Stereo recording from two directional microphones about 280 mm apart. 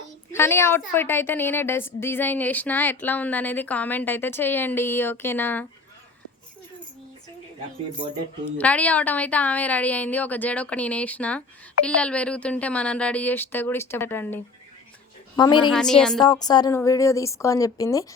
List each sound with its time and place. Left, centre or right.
0.3 s a woman's voice: centre
8.4 s a woman's voice: centre
15.7 s a woman's voice: centre
16.2 s a woman's voice: centre